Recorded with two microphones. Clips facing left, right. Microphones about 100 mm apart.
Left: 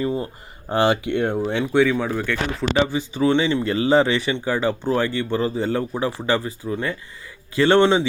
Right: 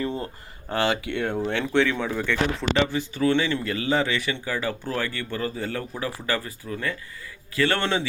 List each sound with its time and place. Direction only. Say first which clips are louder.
0.0 s a sound: left 5 dB; 15° left (ahead or behind)
0.7 s speech: left 6 dB; 20° left (ahead or behind); by 2.6 s 5° left (ahead or behind)
2.7 s speech: left 3 dB; 15° left (ahead or behind)